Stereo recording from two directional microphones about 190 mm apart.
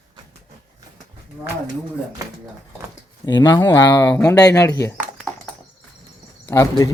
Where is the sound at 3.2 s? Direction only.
20° left (ahead or behind).